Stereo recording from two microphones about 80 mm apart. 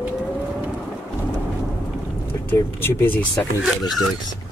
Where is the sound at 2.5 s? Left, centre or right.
Left.